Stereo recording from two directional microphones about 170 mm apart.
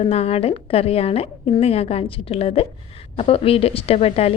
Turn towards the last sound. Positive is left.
turn(degrees=35)  # may be behind; listen again after turning